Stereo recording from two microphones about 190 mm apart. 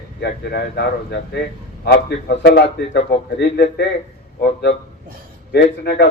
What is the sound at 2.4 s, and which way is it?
A man's voice, 60° left (ahead or behind).